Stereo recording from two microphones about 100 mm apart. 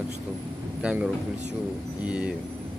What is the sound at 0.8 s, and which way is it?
Speech, 10° right (ahead or behind).